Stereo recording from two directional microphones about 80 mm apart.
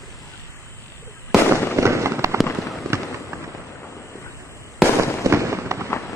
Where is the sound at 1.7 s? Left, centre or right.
Right.